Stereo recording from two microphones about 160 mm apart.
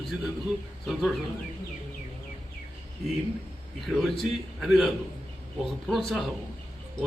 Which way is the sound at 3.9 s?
Centre (ahead or behind).